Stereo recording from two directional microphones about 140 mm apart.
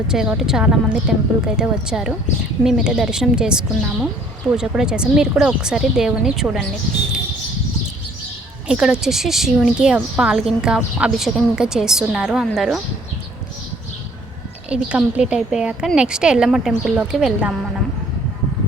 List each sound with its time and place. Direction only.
0.1 s a woman's voice: 5° right (ahead or behind)
8.6 s a woman's voice: 5° right (ahead or behind)
14.7 s a woman's voice: 10° right (ahead or behind)